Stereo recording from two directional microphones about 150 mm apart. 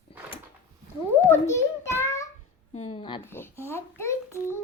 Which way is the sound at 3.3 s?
15° left (ahead or behind).